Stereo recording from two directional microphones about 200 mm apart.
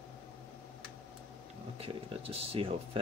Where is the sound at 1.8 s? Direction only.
30° right (ahead or behind).